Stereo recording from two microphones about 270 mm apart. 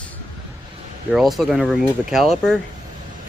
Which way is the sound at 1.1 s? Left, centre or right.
Centre.